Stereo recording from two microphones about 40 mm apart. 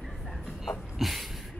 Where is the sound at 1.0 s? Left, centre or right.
Centre.